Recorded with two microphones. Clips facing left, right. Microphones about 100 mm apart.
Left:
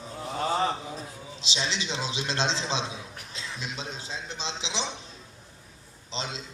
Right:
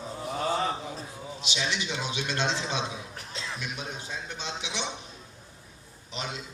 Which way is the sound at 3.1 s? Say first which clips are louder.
Right 2 dB; 40° right (ahead or behind).